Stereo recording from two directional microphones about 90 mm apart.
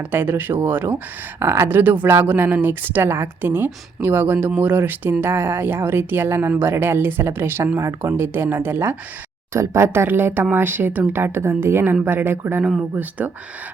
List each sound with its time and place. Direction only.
0.0 s speech: 20° right (ahead or behind)